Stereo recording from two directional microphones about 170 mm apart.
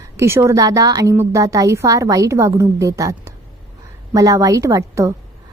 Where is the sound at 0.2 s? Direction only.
15° right (ahead or behind).